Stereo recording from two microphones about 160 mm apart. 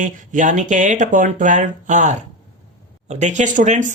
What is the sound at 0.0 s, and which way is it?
Speech, 50° right (ahead or behind).